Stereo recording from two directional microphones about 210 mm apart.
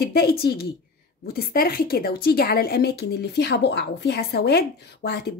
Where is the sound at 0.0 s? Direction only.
50° left (ahead or behind).